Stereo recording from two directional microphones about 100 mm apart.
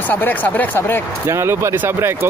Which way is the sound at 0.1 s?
15° left (ahead or behind).